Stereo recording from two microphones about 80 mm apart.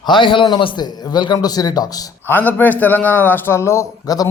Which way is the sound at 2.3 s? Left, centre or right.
Left.